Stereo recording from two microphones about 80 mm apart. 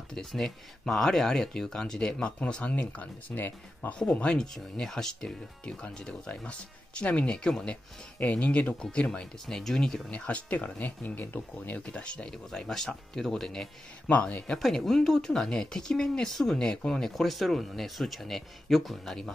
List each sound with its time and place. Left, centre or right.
0.1 s speech: centre
10.2 s speech: centre
14.0 s speech: centre
14.6 s speech: centre